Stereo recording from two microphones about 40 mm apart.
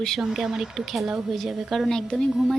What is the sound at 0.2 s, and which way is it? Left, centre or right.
A woman's voice, centre.